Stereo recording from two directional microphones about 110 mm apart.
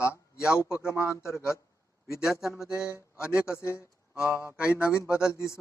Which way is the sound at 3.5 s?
25° left (ahead or behind).